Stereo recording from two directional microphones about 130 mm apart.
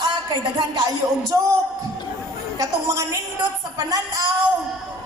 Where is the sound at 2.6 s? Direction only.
25° right (ahead or behind).